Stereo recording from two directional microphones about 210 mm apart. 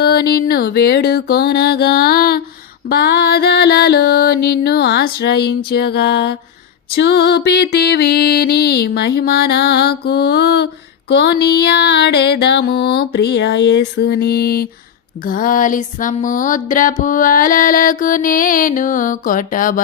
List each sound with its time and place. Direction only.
0.0 s music: 50° left (ahead or behind)